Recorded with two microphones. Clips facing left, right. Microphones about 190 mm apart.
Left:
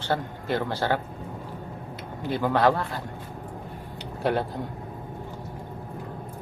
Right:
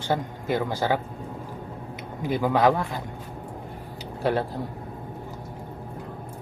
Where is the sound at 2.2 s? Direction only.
10° right (ahead or behind).